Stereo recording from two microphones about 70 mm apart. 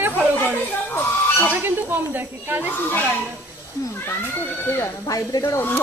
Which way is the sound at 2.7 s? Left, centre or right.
Left.